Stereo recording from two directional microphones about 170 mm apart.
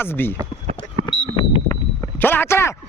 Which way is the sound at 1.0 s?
35° right (ahead or behind).